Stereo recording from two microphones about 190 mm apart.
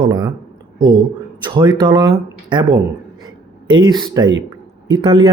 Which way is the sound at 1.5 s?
15° right (ahead or behind).